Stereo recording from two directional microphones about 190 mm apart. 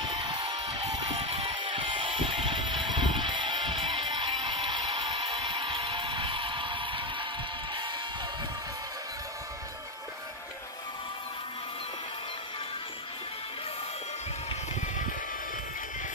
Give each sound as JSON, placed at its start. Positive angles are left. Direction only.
{"t": 0.2, "sound": "music", "side_deg": -20}